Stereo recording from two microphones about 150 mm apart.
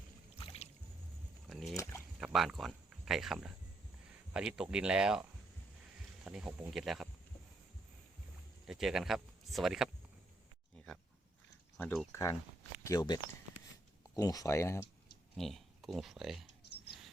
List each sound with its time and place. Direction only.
0.3 s rowboat: 40° left (ahead or behind)
1.5 s a sound: centre (ahead or behind)
1.7 s a sound: 20° left (ahead or behind)
2.1 s speech: 5° right (ahead or behind)
6.2 s speech: 5° right (ahead or behind)
8.6 s speech: 5° right (ahead or behind)
11.8 s speech: 5° left (ahead or behind)
12.1 s speech: 25° left (ahead or behind)
14.2 s speech: 25° left (ahead or behind)
15.4 s speech: centre (ahead or behind)